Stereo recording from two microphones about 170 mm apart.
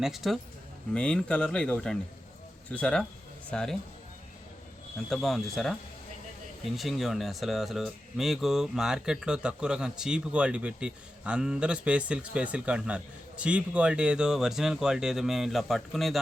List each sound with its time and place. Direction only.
0.0 s speech: centre (ahead or behind)
5.0 s speech: centre (ahead or behind)